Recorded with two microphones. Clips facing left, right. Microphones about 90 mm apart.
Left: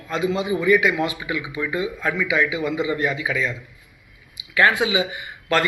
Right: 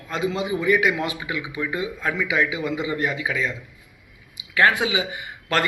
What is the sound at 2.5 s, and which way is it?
Speech, 30° left (ahead or behind).